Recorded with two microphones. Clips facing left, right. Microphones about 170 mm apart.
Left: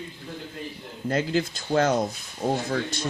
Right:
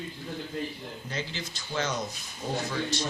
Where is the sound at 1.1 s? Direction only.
55° left (ahead or behind).